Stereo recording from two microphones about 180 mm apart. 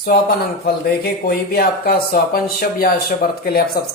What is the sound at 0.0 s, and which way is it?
Speech, 55° left (ahead or behind).